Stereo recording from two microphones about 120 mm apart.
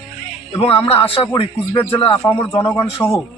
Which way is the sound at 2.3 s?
30° left (ahead or behind).